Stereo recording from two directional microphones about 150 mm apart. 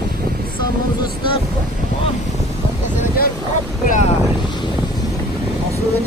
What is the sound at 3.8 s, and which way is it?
Speech, 60° left (ahead or behind).